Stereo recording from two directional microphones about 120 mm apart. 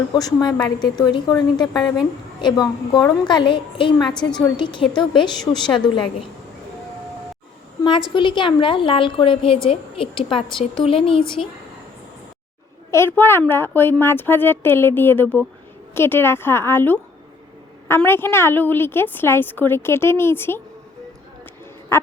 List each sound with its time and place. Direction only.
0.1 s a woman's voice: 30° left (ahead or behind)
7.9 s a woman's voice: 45° left (ahead or behind)
12.9 s a woman's voice: 20° left (ahead or behind)
21.9 s quack: 20° left (ahead or behind)